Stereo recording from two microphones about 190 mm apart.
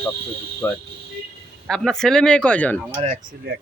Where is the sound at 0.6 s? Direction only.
10° left (ahead or behind).